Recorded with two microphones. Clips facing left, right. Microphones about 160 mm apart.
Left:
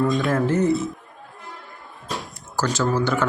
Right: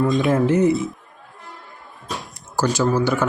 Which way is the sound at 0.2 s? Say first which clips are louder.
Right 3 dB; 20° right (ahead or behind).